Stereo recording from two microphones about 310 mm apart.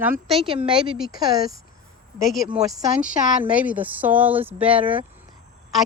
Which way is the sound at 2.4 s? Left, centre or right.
Centre.